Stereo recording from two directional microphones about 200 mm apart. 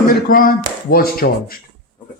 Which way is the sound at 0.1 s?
45° left (ahead or behind).